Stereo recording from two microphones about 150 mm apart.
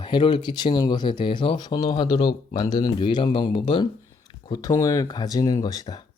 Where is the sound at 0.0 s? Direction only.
35° left (ahead or behind).